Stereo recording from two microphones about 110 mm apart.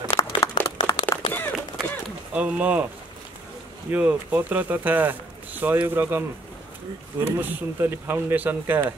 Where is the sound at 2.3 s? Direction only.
10° right (ahead or behind).